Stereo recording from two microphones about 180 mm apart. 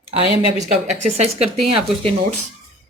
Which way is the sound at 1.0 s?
35° right (ahead or behind).